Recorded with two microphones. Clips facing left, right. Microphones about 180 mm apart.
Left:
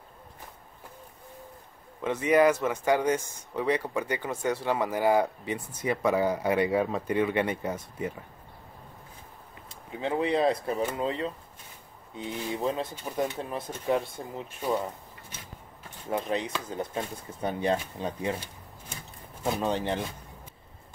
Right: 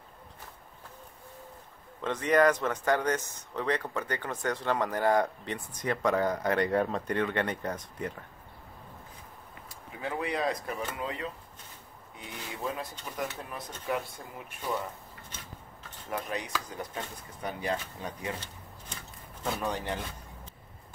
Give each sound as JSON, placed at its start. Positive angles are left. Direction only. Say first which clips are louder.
{"t": 2.0, "sound": "speech", "louder": "left 2 dB", "side_deg": 10}
{"t": 9.9, "sound": "speech", "louder": "left 6 dB", "side_deg": 25}
{"t": 16.1, "sound": "speech", "louder": "left 5 dB", "side_deg": 25}
{"t": 19.4, "sound": "speech", "louder": "left 5 dB", "side_deg": 20}